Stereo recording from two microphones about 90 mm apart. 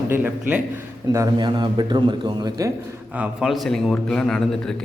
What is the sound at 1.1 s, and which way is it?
Speech, 35° right (ahead or behind).